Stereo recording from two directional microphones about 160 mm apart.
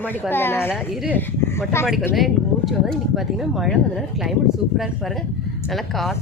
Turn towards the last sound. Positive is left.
turn(degrees=0)  # may be behind; listen again after turning